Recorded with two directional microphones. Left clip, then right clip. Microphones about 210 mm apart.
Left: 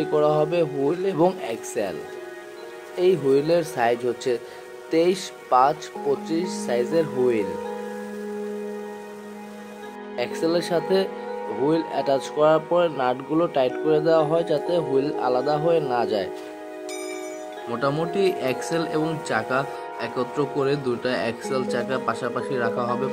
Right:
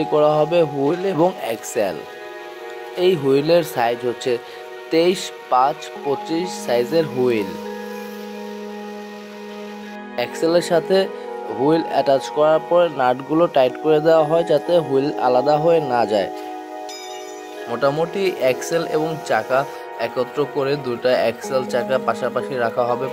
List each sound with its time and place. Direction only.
0.0 s speech: 20° right (ahead or behind)
3.0 s speech: 20° right (ahead or behind)
10.1 s speech: 25° right (ahead or behind)
17.6 s speech: 15° right (ahead or behind)